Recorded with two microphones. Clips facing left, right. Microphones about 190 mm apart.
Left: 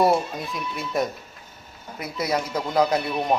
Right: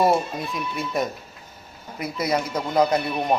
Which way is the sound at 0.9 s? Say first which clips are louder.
Left 3 dB; centre (ahead or behind).